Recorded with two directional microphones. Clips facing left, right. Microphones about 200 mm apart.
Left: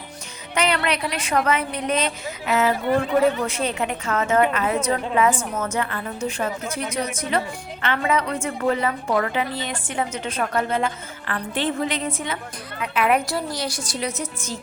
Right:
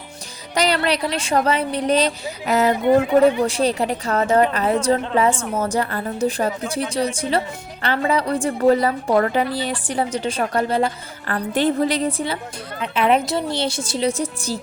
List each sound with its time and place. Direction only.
0.5 s a woman's voice: 35° right (ahead or behind)